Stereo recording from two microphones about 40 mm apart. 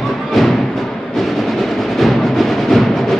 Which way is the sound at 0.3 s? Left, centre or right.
Centre.